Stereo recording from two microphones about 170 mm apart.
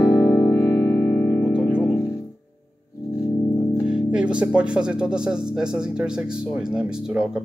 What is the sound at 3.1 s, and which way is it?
Music, 25° left (ahead or behind).